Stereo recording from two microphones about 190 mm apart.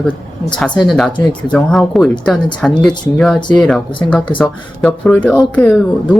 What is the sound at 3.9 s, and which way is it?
Speech, 25° left (ahead or behind).